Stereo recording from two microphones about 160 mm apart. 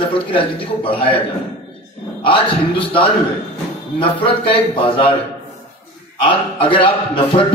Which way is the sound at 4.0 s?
35° left (ahead or behind).